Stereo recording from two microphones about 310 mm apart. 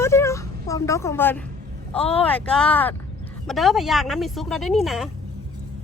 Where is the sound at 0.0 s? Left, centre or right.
Centre.